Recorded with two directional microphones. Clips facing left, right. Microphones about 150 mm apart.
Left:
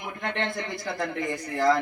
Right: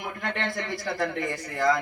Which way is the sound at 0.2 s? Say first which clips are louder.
Left 2 dB; 20° left (ahead or behind).